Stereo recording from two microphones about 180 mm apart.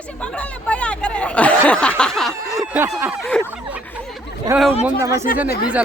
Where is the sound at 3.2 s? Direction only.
5° left (ahead or behind).